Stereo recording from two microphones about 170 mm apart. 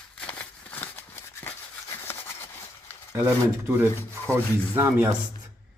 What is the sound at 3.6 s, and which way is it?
Speech, 10° right (ahead or behind).